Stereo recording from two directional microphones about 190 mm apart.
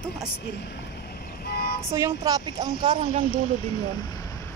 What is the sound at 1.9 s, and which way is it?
Speech, 15° right (ahead or behind).